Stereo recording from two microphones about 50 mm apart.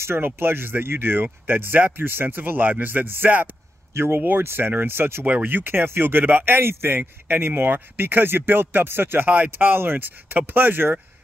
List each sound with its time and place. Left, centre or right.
0.0 s speech: right
3.9 s speech: right
5.2 s speech: right